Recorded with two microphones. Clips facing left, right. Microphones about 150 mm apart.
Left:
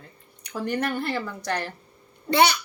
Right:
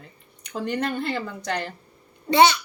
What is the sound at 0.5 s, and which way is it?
A child's voice, 20° right (ahead or behind).